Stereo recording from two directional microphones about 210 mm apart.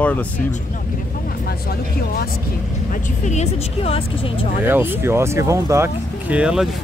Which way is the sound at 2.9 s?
35° left (ahead or behind).